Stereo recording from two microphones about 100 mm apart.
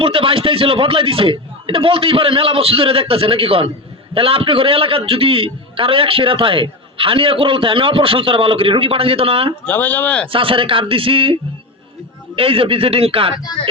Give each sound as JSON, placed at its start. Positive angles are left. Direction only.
{"t": 0.0, "sound": "a man's voice", "side_deg": -65}
{"t": 9.6, "sound": "speech", "side_deg": 15}
{"t": 10.3, "sound": "a man's voice", "side_deg": -65}
{"t": 12.4, "sound": "speech", "side_deg": -70}